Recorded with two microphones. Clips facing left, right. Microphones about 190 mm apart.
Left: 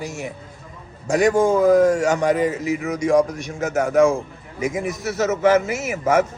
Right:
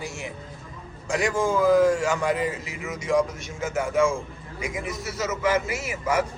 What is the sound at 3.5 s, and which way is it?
Speech, 40° left (ahead or behind).